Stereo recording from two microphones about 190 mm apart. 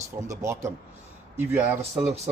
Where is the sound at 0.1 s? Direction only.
15° right (ahead or behind).